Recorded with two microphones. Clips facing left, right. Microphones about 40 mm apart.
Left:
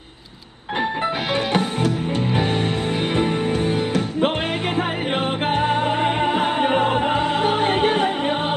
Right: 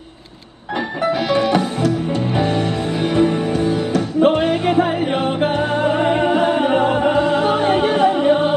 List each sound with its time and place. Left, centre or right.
3.2 s music: left
6.3 s music: left